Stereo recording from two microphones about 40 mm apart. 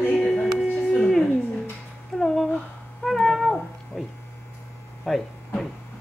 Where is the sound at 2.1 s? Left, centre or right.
Centre.